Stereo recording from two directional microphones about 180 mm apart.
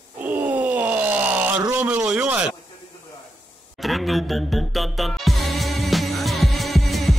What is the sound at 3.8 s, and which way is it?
Music, centre (ahead or behind).